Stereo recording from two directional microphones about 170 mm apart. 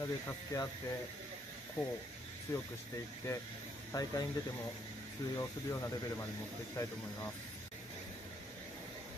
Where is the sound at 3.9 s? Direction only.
20° left (ahead or behind).